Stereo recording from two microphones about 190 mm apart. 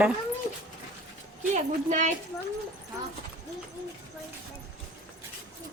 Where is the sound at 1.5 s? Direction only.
40° right (ahead or behind).